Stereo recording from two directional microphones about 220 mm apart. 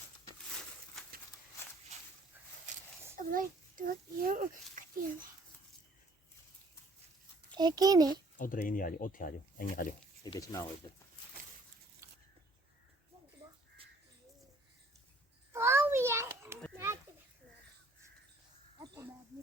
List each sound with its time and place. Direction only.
3.2 s a child's voice: 40° right (ahead or behind)
7.5 s a child's voice: 20° right (ahead or behind)
8.4 s speech: 40° left (ahead or behind)
10.2 s speech: 15° left (ahead or behind)
12.0 s a sound: 10° right (ahead or behind)
13.8 s bird: 25° right (ahead or behind)
15.5 s children playing: 10° right (ahead or behind)